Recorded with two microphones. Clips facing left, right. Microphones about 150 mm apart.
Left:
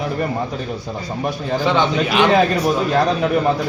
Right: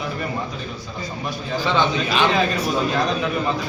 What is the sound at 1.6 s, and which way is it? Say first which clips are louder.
Speech: left 3 dB; 15° left (ahead or behind).